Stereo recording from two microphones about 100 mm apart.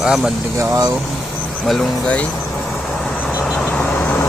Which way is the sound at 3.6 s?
10° left (ahead or behind).